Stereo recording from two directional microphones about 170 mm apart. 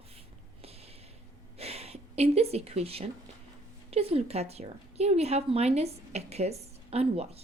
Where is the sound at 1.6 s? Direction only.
35° right (ahead or behind).